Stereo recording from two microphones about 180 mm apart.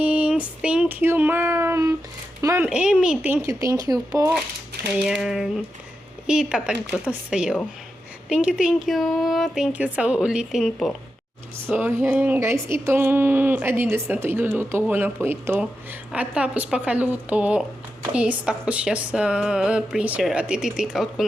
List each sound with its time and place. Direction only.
0.0 s child singing: 5° right (ahead or behind)
2.4 s a sound: 15° right (ahead or behind)
2.6 s speech: 5° right (ahead or behind)
3.4 s speech: 15° right (ahead or behind)
5.0 s speech: 5° right (ahead or behind)
11.6 s speech: 10° right (ahead or behind)